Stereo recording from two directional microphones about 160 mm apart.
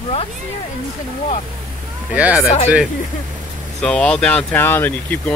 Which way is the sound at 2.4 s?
45° left (ahead or behind).